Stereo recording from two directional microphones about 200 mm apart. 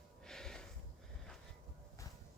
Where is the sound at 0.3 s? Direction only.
5° left (ahead or behind).